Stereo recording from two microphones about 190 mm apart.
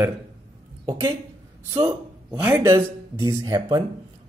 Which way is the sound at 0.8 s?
20° right (ahead or behind).